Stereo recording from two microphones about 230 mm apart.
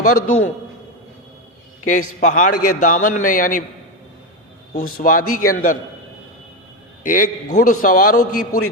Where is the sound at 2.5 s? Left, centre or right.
Left.